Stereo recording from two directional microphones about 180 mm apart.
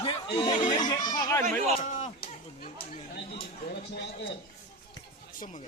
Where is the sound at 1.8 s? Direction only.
45° left (ahead or behind).